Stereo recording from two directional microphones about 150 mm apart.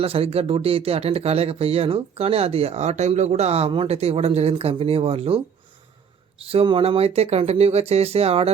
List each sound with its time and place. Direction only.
0.0 s speech: 40° right (ahead or behind)
6.5 s speech: 40° right (ahead or behind)